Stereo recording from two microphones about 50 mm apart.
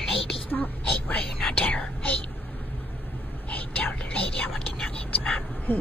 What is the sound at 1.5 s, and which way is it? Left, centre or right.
Whispering, left.